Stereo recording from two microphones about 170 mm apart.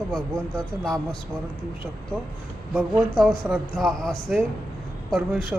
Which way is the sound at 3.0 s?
Centre (ahead or behind).